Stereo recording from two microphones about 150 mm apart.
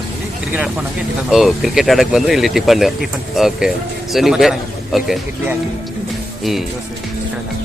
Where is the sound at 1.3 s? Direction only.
Centre (ahead or behind).